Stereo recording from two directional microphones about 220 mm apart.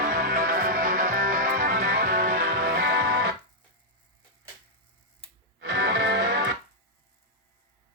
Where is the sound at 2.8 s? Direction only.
45° right (ahead or behind).